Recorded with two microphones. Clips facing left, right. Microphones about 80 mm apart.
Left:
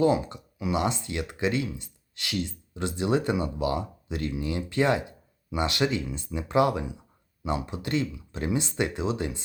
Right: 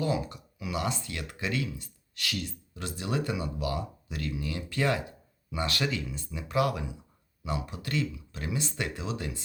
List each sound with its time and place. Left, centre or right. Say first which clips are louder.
0.0 s speech: left 7 dB; left